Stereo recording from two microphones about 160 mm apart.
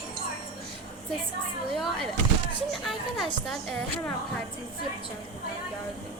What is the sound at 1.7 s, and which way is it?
A woman's voice, centre (ahead or behind).